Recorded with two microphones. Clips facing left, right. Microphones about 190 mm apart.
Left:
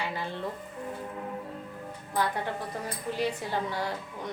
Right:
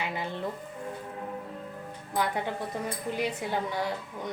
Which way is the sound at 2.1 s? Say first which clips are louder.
Even; 15° right (ahead or behind).